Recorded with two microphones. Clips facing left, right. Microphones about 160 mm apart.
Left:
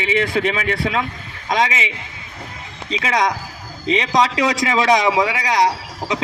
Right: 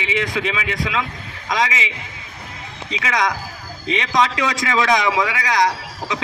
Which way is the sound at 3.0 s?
30° left (ahead or behind).